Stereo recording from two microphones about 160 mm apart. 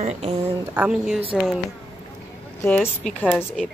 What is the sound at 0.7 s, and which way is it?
Speech, 5° right (ahead or behind).